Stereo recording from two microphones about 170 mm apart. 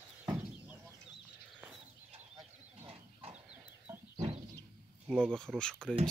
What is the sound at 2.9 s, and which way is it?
Livestock, 35° right (ahead or behind).